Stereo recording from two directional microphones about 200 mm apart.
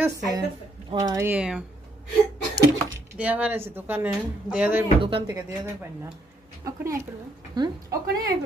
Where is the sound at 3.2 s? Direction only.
10° right (ahead or behind).